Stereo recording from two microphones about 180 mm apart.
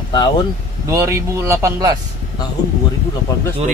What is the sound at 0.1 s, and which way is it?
Speech, 25° left (ahead or behind).